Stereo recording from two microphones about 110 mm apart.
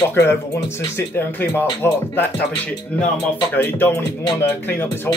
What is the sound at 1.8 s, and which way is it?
Speech, 15° left (ahead or behind).